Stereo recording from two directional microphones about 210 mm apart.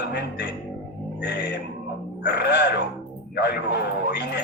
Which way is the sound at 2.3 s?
50° left (ahead or behind).